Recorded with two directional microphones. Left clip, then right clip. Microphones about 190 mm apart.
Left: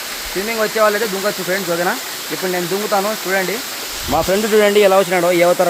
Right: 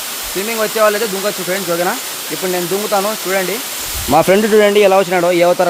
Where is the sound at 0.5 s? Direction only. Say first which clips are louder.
Right 2 dB; 10° right (ahead or behind).